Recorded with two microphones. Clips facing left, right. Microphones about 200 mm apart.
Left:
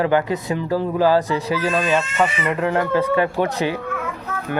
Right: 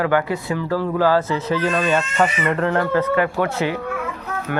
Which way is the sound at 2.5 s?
10° left (ahead or behind).